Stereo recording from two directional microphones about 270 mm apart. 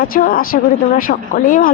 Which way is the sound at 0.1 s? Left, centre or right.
Left.